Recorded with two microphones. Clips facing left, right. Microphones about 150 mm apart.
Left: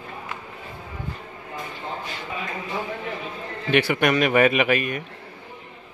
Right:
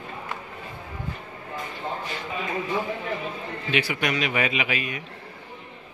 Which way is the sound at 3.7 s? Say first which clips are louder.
Left 6 dB; 55° left (ahead or behind).